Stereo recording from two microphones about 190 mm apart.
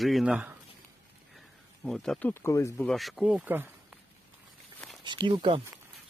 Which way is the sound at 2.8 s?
Centre (ahead or behind).